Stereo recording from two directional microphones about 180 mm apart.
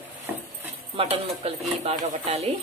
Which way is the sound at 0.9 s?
30° right (ahead or behind).